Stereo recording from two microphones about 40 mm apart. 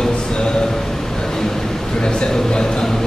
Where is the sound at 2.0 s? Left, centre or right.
Left.